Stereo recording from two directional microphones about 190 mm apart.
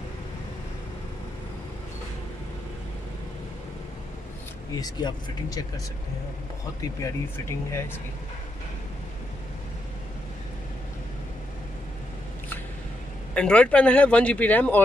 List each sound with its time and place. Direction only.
4.7 s speech: 20° left (ahead or behind)
7.0 s speech: 15° left (ahead or behind)
13.3 s speech: 5° left (ahead or behind)